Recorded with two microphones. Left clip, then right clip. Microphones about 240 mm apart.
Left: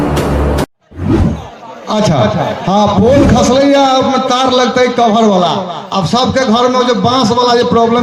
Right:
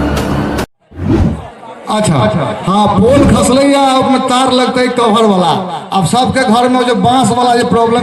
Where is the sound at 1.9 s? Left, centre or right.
Right.